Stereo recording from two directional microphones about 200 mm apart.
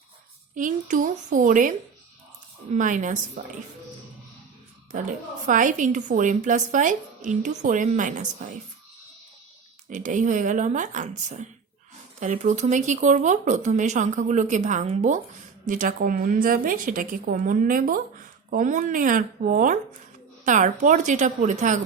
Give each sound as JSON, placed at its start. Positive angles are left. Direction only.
{"t": 0.5, "sound": "a woman's voice", "side_deg": -40}
{"t": 2.7, "sound": "a woman's voice", "side_deg": -40}
{"t": 4.9, "sound": "a woman's voice", "side_deg": -40}
{"t": 9.9, "sound": "a woman's voice", "side_deg": -40}